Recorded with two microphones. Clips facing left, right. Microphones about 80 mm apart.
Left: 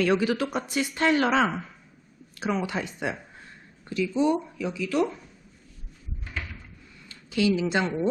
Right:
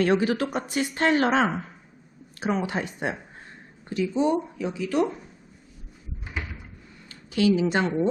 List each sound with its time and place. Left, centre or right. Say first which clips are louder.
0.0 s speech: right 1 dB; right
2.5 s speech: right 2 dB; right
6.2 s cupboard open or close: right 2 dB; centre
7.3 s speech: right 2 dB; right